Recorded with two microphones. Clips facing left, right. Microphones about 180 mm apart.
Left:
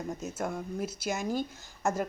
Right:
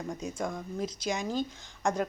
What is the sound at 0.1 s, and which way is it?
Speech, 5° left (ahead or behind).